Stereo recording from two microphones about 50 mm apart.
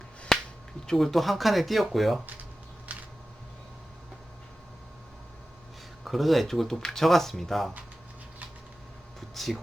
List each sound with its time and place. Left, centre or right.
0.3 s finger snapping: centre
0.9 s speech: centre
2.9 s a sound: right
6.1 s speech: centre
9.3 s speech: centre